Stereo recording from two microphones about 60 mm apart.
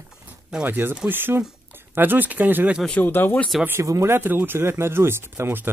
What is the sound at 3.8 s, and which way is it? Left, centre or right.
Speech, right.